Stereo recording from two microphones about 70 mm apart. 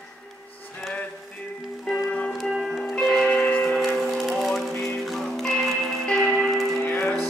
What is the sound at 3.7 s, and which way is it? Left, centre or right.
Music, centre.